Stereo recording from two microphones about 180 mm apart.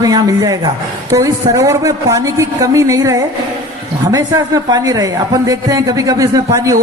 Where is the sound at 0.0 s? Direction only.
20° right (ahead or behind).